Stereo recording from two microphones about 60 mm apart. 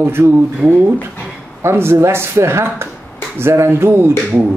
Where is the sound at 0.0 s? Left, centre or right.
Right.